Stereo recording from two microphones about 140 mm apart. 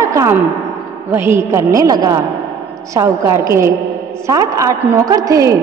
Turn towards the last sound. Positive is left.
turn(degrees=-25)  # may be behind; listen again after turning